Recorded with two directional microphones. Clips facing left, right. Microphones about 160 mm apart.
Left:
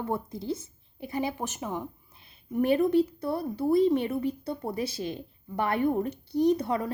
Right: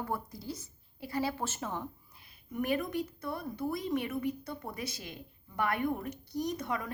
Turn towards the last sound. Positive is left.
turn(degrees=30)  # may be behind; listen again after turning